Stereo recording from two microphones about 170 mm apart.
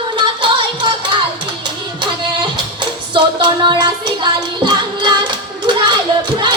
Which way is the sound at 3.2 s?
25° right (ahead or behind).